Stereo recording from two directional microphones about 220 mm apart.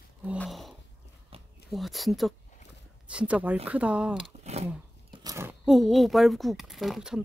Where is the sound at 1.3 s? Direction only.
25° right (ahead or behind).